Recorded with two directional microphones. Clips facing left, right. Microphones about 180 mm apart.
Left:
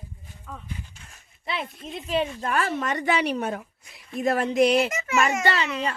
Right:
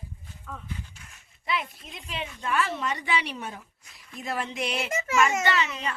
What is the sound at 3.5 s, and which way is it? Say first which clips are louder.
Speech: left 11 dB; 65° left (ahead or behind).